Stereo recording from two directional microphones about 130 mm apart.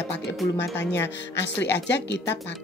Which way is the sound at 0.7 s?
20° left (ahead or behind).